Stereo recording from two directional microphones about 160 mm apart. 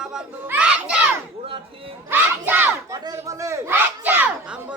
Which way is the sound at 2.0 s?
10° right (ahead or behind).